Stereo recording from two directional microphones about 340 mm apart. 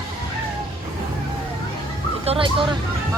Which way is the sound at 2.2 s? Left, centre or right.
Centre.